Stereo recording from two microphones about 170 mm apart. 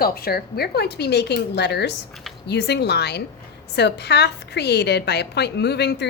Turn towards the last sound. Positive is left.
turn(degrees=80)